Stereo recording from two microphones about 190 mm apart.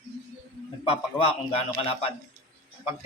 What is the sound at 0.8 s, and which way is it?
Speech, 30° left (ahead or behind).